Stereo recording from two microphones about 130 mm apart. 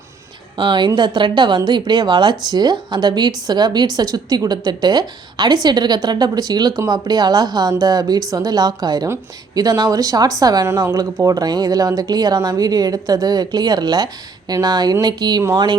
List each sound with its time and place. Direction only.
0.5 s a woman's voice: 35° right (ahead or behind)